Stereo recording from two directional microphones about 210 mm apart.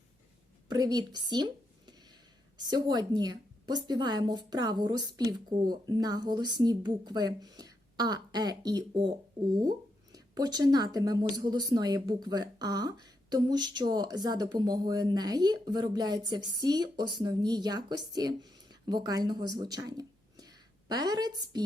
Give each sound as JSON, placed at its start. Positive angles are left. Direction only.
{"t": 0.7, "sound": "speech", "side_deg": -20}
{"t": 1.9, "sound": "a sound", "side_deg": -20}
{"t": 2.6, "sound": "speech", "side_deg": -20}